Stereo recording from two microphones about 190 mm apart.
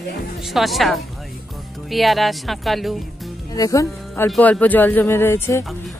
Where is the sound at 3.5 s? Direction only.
15° left (ahead or behind).